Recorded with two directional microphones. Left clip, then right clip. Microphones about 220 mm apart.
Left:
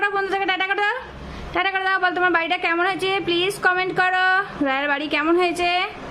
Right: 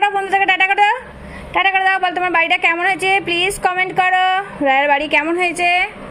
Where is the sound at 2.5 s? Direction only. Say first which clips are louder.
Right 6 dB; 35° left (ahead or behind).